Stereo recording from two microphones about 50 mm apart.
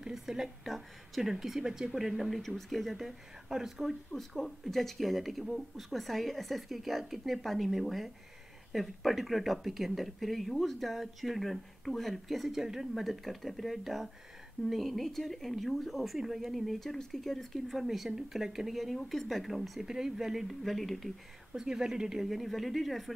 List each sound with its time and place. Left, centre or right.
0.0 s a woman's voice: centre
4.1 s a woman's voice: centre
21.5 s a woman's voice: centre